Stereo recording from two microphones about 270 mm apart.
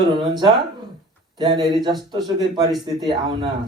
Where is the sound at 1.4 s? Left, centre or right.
Centre.